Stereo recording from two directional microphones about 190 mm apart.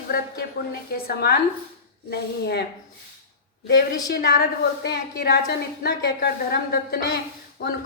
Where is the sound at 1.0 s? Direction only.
55° left (ahead or behind).